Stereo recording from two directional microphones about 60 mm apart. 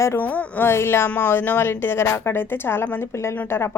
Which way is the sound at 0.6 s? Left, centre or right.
Left.